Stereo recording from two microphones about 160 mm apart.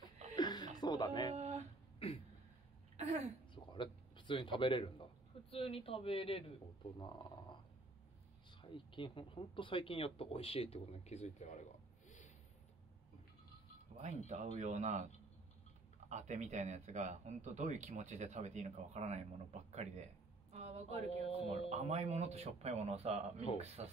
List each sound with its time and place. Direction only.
0.4 s chuckle: 25° left (ahead or behind)
0.7 s music: 25° left (ahead or behind)
1.3 s a sound: 45° right (ahead or behind)
2.0 s a sound: 35° left (ahead or behind)
3.0 s throat clearing: 40° right (ahead or behind)
3.5 s speech: 30° left (ahead or behind)
7.0 s speech: 25° left (ahead or behind); by 11.6 s 45° left (ahead or behind)
13.9 s speech: 45° right (ahead or behind)
16.1 s speech: 50° right (ahead or behind)